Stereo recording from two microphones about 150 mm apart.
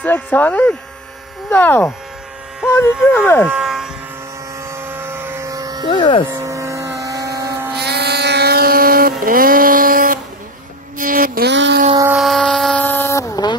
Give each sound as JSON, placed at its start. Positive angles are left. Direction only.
{"t": 0.0, "sound": "speech", "side_deg": 10}
{"t": 3.4, "sound": "electric shaver", "side_deg": -5}
{"t": 4.6, "sound": "vehicle", "side_deg": -15}
{"t": 5.9, "sound": "speech", "side_deg": 30}
{"t": 6.3, "sound": "vehicle", "side_deg": -20}
{"t": 7.7, "sound": "motorboat", "side_deg": -90}
{"t": 9.2, "sound": "a sound", "side_deg": -70}
{"t": 11.0, "sound": "music", "side_deg": -65}
{"t": 12.2, "sound": "a sound", "side_deg": 0}
{"t": 12.8, "sound": "a sound", "side_deg": 15}